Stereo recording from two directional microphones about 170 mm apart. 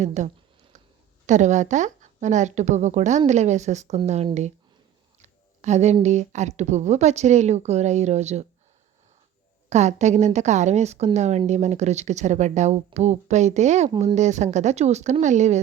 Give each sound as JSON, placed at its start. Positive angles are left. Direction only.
{"t": 0.0, "sound": "a woman's voice", "side_deg": -45}
{"t": 1.3, "sound": "a woman's voice", "side_deg": -45}
{"t": 9.6, "sound": "a woman's voice", "side_deg": -40}
{"t": 13.9, "sound": "speech", "side_deg": -25}
{"t": 14.2, "sound": "a woman's voice", "side_deg": -45}